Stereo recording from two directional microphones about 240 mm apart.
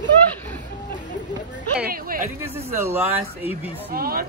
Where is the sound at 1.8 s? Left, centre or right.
Right.